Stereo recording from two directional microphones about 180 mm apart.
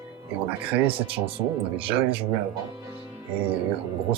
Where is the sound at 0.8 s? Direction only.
30° right (ahead or behind).